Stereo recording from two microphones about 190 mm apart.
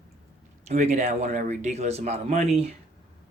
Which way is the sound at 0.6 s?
35° right (ahead or behind).